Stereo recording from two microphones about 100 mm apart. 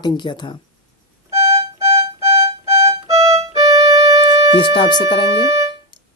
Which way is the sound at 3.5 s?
35° right (ahead or behind).